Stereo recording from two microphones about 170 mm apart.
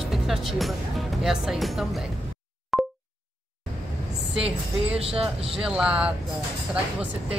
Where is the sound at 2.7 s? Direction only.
Centre (ahead or behind).